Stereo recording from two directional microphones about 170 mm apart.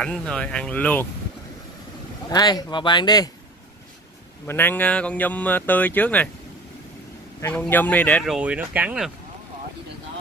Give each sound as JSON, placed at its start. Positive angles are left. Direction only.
{"t": 0.0, "sound": "speech", "side_deg": 5}
{"t": 2.2, "sound": "speech", "side_deg": 25}
{"t": 4.5, "sound": "speech", "side_deg": 10}
{"t": 7.4, "sound": "speech", "side_deg": 10}
{"t": 8.4, "sound": "speech", "side_deg": -10}